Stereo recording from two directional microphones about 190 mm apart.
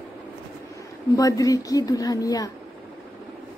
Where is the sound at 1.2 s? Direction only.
15° left (ahead or behind).